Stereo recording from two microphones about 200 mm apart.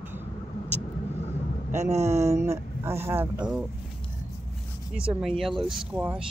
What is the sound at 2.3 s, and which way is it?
Speech, 15° right (ahead or behind).